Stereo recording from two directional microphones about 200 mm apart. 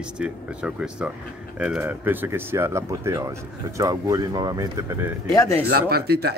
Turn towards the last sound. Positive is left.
turn(degrees=-50)  # may be behind; listen again after turning